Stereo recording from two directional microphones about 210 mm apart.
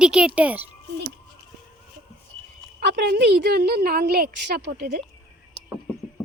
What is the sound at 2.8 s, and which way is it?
A woman's voice, 50° right (ahead or behind).